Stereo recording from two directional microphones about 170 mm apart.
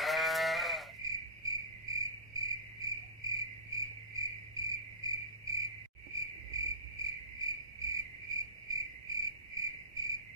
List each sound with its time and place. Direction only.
0.0 s sheep: centre (ahead or behind)
1.0 s cricket: 20° right (ahead or behind)